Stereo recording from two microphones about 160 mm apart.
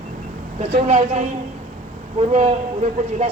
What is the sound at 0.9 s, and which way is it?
A man's voice, 45° right (ahead or behind).